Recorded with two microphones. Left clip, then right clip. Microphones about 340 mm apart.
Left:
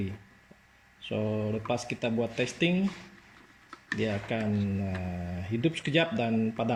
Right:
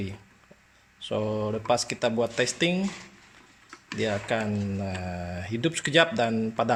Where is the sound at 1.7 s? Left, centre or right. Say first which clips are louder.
Right 9 dB; centre.